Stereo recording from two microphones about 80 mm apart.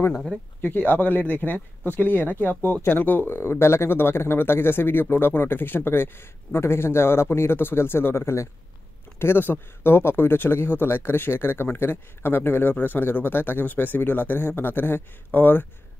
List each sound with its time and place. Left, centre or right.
0.8 s speech: left